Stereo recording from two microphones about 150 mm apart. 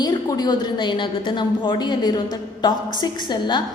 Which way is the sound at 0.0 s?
25° left (ahead or behind).